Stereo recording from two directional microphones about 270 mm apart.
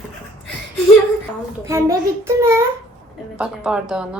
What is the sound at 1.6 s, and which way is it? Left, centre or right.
A child's voice, centre.